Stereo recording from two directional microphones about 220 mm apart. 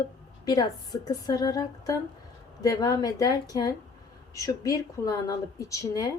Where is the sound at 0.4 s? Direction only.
20° left (ahead or behind).